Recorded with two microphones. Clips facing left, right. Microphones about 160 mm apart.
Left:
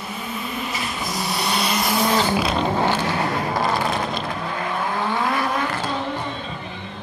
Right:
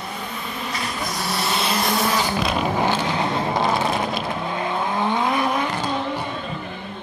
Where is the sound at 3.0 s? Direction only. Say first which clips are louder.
Even; 20° right (ahead or behind).